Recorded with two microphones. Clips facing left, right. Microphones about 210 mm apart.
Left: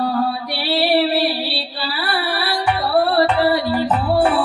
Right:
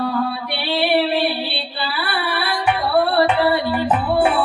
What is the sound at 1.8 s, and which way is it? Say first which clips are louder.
Music: left 1 dB; 35° left (ahead or behind).